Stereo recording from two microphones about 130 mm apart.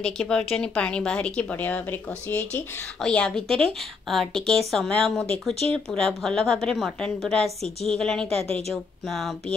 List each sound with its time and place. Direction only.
0.0 s a woman's voice: 5° left (ahead or behind)
8.4 s speech: 50° right (ahead or behind)
9.0 s a woman's voice: centre (ahead or behind)